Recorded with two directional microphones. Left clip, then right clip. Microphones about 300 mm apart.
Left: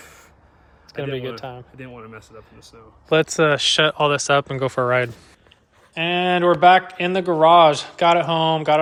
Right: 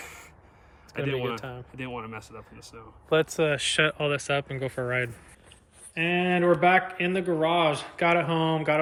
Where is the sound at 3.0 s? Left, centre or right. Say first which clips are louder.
Left 7 dB; left.